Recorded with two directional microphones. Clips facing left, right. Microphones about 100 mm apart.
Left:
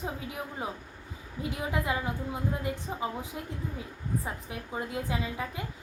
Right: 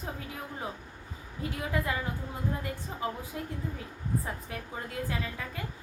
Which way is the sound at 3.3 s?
15° left (ahead or behind).